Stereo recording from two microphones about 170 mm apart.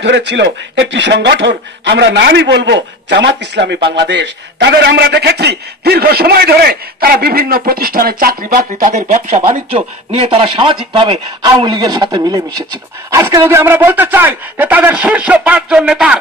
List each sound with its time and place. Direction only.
0.0 s a man's voice: 90° right; by 16.2 s 5° right (ahead or behind)